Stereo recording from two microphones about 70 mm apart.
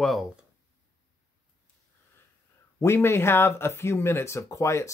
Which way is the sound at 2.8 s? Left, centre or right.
Left.